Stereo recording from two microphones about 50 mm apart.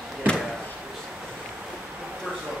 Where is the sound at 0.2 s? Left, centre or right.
Right.